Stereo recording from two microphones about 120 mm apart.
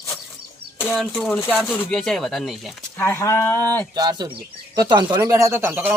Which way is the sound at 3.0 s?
20° left (ahead or behind).